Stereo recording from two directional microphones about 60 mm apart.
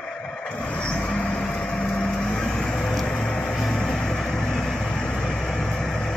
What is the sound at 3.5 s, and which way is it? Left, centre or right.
Vehicle, centre.